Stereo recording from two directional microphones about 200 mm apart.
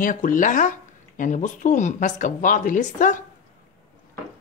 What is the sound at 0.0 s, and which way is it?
Speech, 40° left (ahead or behind).